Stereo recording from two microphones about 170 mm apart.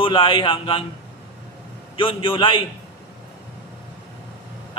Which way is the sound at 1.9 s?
30° left (ahead or behind).